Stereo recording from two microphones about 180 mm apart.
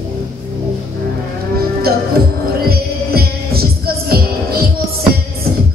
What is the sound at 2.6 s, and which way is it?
Music, 60° right (ahead or behind).